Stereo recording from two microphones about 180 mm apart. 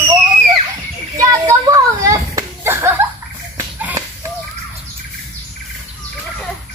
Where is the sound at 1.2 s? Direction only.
20° right (ahead or behind).